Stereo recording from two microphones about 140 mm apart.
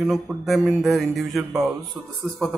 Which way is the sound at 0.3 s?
15° right (ahead or behind).